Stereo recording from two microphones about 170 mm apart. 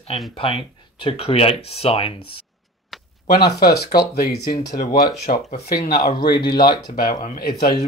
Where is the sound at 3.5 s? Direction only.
65° left (ahead or behind).